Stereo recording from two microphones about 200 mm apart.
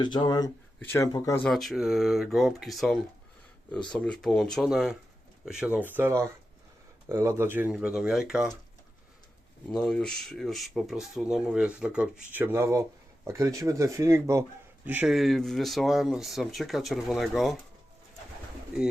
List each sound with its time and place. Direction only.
0.0 s speech: 20° left (ahead or behind)
1.5 s speech: centre (ahead or behind)
9.7 s speech: 5° left (ahead or behind)